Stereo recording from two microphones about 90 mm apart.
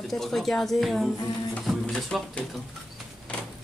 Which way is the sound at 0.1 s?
5° left (ahead or behind).